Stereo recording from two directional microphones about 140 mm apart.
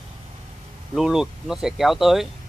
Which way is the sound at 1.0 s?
5° right (ahead or behind).